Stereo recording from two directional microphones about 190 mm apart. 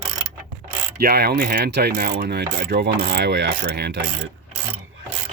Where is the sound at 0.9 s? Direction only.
55° right (ahead or behind).